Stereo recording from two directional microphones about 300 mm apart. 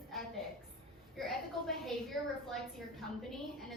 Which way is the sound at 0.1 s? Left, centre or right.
Centre.